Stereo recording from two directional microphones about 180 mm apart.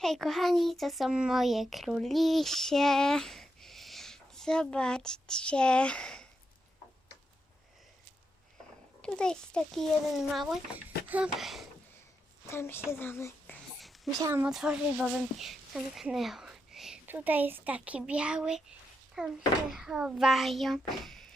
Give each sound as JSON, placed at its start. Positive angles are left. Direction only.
{"t": 0.0, "sound": "a child's voice", "side_deg": 0}
{"t": 9.0, "sound": "a child's voice", "side_deg": 5}
{"t": 12.5, "sound": "a child's voice", "side_deg": 15}
{"t": 14.2, "sound": "speech", "side_deg": -15}
{"t": 14.4, "sound": "a child's voice", "side_deg": -5}